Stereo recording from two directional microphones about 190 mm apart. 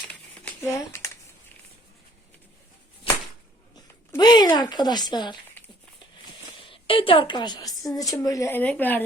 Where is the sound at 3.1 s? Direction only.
30° left (ahead or behind).